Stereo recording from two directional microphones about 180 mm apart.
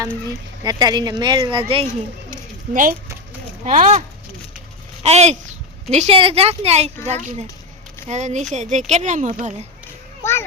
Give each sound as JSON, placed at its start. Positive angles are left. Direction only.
{"t": 0.6, "sound": "speech", "side_deg": -20}
{"t": 3.7, "sound": "speech", "side_deg": -40}
{"t": 5.0, "sound": "speech", "side_deg": -35}
{"t": 10.2, "sound": "a child's voice", "side_deg": 15}